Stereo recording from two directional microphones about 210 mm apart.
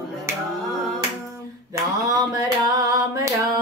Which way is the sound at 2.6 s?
15° right (ahead or behind).